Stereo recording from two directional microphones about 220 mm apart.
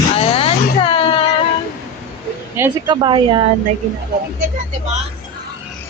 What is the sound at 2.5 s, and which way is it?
Speech, 10° right (ahead or behind).